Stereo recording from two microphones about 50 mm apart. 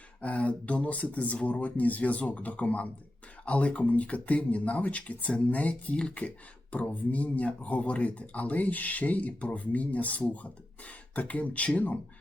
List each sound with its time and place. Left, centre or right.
0.2 s speech: left